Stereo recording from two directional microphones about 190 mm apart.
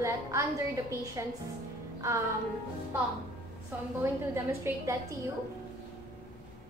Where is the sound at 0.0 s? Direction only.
15° right (ahead or behind).